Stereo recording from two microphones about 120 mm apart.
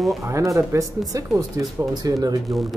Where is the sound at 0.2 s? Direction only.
25° right (ahead or behind).